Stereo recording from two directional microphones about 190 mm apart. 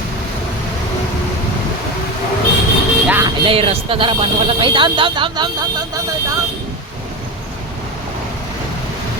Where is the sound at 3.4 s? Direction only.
30° right (ahead or behind).